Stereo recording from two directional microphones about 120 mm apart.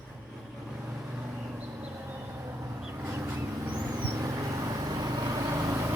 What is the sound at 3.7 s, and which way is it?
Vehicle, 35° right (ahead or behind).